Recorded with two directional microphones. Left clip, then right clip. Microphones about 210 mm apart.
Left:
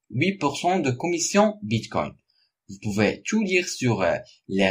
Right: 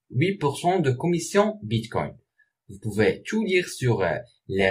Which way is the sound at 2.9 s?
35° left (ahead or behind).